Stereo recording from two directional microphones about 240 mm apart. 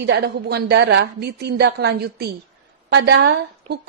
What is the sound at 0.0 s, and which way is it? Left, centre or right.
A woman's voice, right.